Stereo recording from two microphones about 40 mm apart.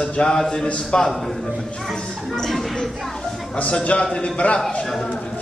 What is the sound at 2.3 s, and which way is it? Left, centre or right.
Speech, centre.